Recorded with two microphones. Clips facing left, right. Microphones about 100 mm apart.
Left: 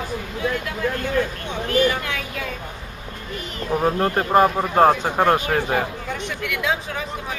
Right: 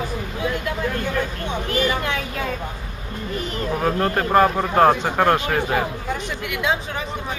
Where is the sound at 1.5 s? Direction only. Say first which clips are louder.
Left 2 dB; 20° right (ahead or behind).